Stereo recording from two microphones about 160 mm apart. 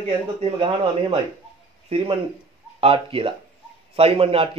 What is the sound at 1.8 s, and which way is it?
A man's voice, 35° right (ahead or behind).